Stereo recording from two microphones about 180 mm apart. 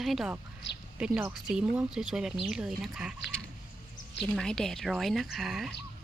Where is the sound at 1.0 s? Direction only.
5° right (ahead or behind).